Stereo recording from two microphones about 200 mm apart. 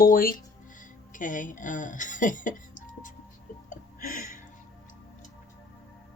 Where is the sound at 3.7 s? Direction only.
40° left (ahead or behind).